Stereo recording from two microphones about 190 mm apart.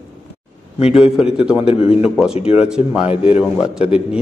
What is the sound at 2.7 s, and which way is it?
Speech, 5° right (ahead or behind).